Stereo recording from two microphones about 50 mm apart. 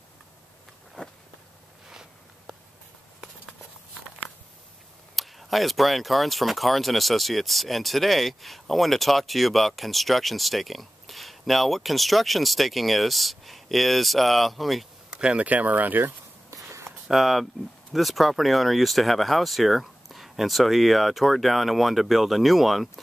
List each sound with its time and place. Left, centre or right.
1.0 s walk: centre
5.1 s speech: centre
15.0 s a sound: centre
15.4 s speech: right
17.1 s speech: centre